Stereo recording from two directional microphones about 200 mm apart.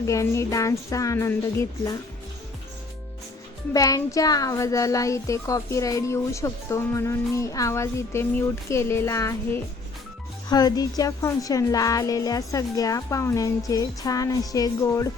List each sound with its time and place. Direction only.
0.0 s speech: 15° left (ahead or behind)
3.7 s speech: 15° left (ahead or behind)